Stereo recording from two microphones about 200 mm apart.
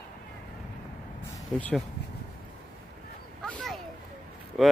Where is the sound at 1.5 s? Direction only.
5° left (ahead or behind).